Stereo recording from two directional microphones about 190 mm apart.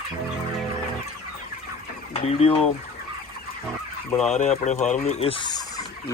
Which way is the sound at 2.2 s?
30° left (ahead or behind).